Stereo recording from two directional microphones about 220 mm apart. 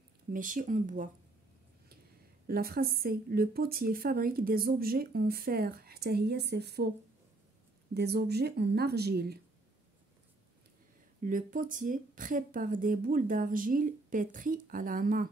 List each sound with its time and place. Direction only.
0.3 s speech: 40° right (ahead or behind)
2.4 s speech: 45° right (ahead or behind)
7.9 s speech: 50° right (ahead or behind)
11.2 s speech: 40° right (ahead or behind)